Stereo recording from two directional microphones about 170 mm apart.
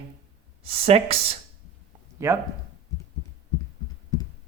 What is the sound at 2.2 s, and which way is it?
Speech, 15° right (ahead or behind).